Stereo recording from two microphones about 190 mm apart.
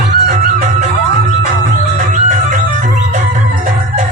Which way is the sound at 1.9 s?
40° right (ahead or behind).